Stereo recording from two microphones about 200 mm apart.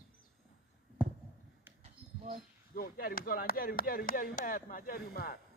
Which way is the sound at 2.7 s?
45° left (ahead or behind).